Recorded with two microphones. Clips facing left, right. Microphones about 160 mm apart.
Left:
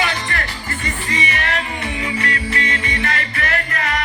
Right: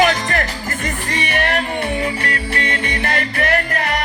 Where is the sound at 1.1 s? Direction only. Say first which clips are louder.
Right 4 dB; 60° right (ahead or behind).